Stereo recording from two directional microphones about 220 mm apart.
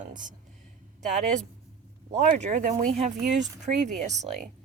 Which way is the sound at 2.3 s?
35° right (ahead or behind).